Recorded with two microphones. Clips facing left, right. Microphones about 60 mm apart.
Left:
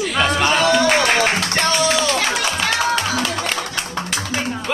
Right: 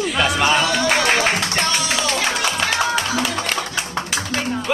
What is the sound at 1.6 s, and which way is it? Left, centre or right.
Music, left.